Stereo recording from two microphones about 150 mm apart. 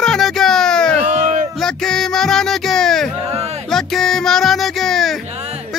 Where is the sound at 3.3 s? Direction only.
45° right (ahead or behind).